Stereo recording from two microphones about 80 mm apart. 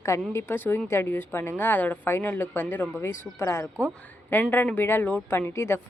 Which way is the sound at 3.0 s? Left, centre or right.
Left.